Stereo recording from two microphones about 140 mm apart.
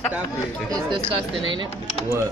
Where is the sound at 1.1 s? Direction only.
40° right (ahead or behind).